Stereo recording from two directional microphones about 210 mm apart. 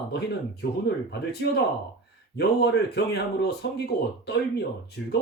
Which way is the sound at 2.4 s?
55° left (ahead or behind).